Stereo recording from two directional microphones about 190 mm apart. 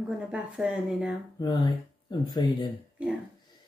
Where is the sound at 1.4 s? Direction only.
25° left (ahead or behind).